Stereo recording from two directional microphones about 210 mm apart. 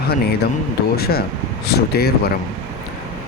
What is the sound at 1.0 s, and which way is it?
Speech, 45° left (ahead or behind).